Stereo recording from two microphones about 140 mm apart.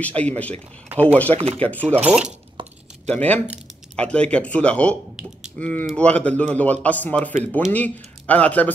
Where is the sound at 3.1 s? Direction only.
10° left (ahead or behind).